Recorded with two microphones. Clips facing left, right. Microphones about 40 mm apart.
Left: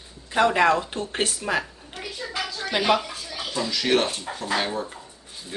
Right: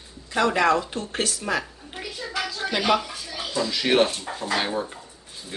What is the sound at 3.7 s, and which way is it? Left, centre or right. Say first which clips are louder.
Speech: right 2 dB; centre.